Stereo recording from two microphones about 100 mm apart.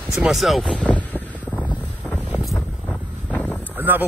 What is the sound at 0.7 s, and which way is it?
Boat, 15° left (ahead or behind).